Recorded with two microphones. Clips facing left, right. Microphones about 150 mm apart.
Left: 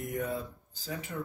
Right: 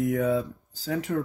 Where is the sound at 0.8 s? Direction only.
80° right.